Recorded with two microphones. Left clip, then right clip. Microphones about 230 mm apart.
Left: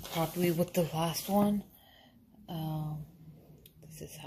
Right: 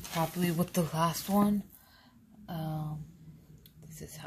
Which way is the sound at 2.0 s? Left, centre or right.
Centre.